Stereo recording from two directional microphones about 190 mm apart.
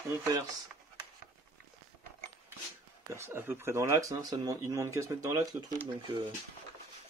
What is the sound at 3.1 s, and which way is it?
Speech, 15° right (ahead or behind).